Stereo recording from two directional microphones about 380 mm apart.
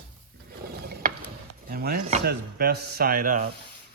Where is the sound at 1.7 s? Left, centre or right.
Right.